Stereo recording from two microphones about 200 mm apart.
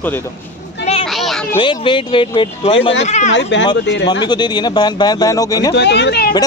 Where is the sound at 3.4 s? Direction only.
65° left (ahead or behind).